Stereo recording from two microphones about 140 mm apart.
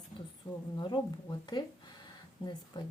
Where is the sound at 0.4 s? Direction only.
20° left (ahead or behind).